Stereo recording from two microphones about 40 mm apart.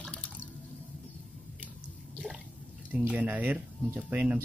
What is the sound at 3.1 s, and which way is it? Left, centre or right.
Speech, right.